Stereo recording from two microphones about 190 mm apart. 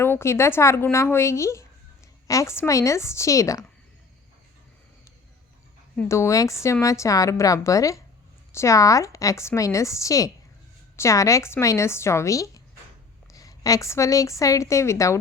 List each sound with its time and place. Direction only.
0.0 s a woman's voice: 15° left (ahead or behind)
6.0 s a woman's voice: 15° left (ahead or behind)